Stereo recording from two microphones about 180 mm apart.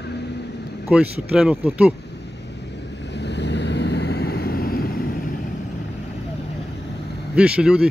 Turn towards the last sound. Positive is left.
turn(degrees=-5)  # may be behind; listen again after turning